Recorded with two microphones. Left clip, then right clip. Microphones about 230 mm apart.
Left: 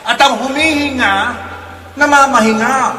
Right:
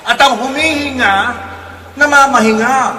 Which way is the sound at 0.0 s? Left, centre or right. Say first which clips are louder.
Right 1 dB; centre.